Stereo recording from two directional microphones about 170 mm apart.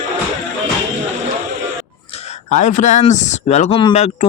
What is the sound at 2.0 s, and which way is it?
Speech, 40° left (ahead or behind).